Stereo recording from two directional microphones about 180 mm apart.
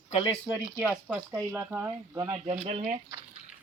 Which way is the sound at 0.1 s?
30° left (ahead or behind).